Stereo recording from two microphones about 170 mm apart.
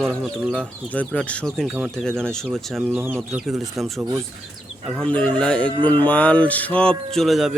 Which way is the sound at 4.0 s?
15° right (ahead or behind).